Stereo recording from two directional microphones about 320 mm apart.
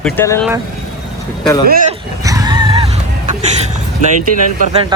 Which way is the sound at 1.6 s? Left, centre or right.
Right.